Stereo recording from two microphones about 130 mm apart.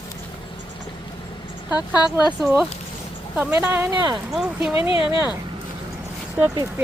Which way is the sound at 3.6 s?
15° right (ahead or behind).